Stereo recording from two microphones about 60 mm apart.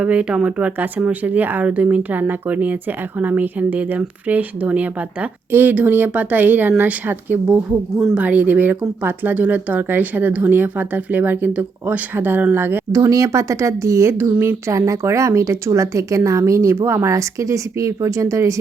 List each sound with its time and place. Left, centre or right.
0.0 s speech: centre
5.5 s speech: right
8.1 s speech: right
12.9 s speech: right